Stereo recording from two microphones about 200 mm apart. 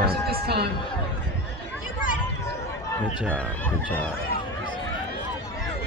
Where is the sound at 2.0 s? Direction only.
40° left (ahead or behind).